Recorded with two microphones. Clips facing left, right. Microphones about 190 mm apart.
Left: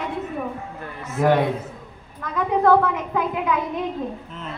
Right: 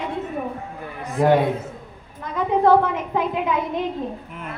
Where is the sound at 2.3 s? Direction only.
25° right (ahead or behind).